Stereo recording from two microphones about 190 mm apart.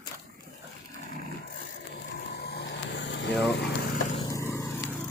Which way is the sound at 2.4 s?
60° left (ahead or behind).